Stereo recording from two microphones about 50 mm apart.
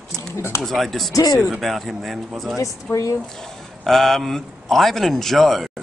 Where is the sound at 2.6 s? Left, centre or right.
Left.